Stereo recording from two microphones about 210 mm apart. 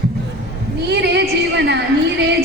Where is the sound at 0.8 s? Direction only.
55° right (ahead or behind).